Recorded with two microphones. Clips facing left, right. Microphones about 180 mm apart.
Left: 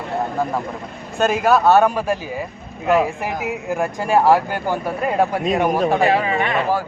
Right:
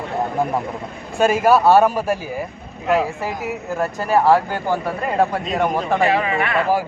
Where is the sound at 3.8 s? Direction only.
10° left (ahead or behind).